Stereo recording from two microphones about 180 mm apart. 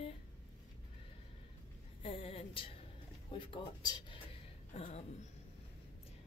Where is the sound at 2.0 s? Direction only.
30° left (ahead or behind).